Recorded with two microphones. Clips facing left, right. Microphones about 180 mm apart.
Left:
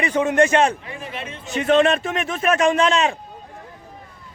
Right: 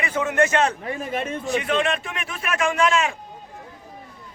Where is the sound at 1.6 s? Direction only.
40° left (ahead or behind).